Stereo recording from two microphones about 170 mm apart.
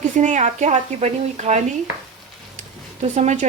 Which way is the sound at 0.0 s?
45° right (ahead or behind).